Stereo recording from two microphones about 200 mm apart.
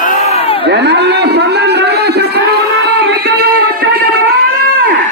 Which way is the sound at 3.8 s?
60° right (ahead or behind).